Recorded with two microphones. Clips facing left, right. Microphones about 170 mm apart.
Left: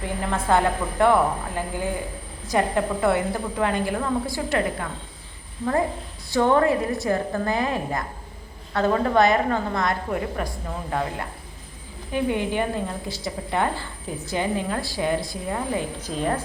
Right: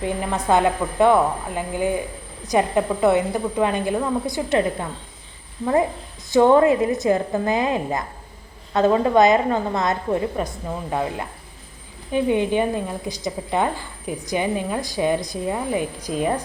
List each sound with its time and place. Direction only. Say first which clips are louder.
0.0 s a woman's voice: right 3 dB; 20° right (ahead or behind)
6.3 s a woman's voice: right 5 dB; 20° right (ahead or behind)